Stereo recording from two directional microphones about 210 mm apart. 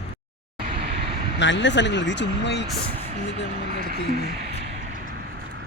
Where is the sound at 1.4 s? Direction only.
60° left (ahead or behind).